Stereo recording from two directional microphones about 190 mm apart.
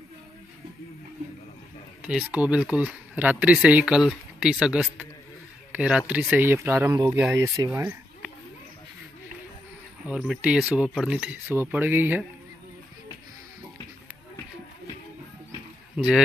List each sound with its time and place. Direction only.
2.0 s speech: 5° right (ahead or behind)
10.0 s speech: 5° right (ahead or behind)